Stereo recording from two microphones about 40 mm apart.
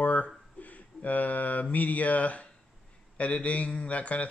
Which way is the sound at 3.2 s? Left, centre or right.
Left.